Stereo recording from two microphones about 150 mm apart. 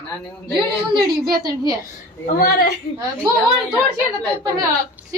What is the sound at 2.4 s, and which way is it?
Speech, 90° left.